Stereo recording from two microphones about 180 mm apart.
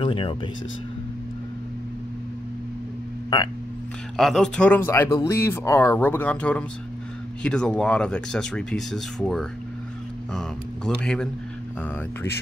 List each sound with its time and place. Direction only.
0.0 s speech: 30° left (ahead or behind)
4.2 s speech: centre (ahead or behind)
11.0 s speech: 5° left (ahead or behind)